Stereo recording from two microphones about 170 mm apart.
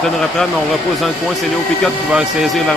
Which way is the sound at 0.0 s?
Centre (ahead or behind).